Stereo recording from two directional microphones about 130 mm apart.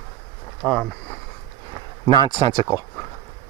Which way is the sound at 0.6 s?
5° left (ahead or behind).